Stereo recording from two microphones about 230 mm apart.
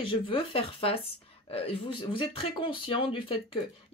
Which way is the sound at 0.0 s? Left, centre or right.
Left.